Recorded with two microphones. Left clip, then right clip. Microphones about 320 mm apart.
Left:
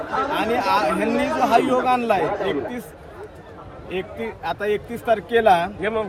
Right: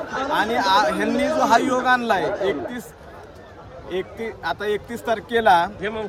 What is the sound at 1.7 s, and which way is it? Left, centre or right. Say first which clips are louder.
Speech: even; centre.